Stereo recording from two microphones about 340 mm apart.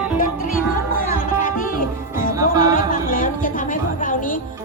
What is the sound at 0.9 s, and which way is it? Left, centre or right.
Music, left.